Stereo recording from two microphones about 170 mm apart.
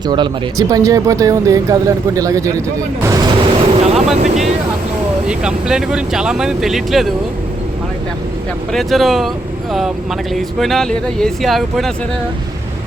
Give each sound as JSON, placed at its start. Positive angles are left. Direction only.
{"t": 0.1, "sound": "speech", "side_deg": -25}
{"t": 5.3, "sound": "speech", "side_deg": -5}
{"t": 8.7, "sound": "speech", "side_deg": 0}
{"t": 10.3, "sound": "speech", "side_deg": 0}